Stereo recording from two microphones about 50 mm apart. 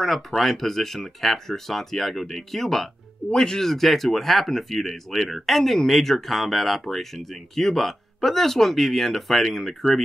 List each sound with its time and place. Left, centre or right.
0.0 s speech: centre